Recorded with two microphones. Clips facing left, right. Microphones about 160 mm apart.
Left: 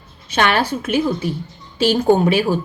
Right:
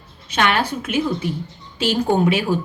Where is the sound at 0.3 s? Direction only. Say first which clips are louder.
Left 2 dB; 35° left (ahead or behind).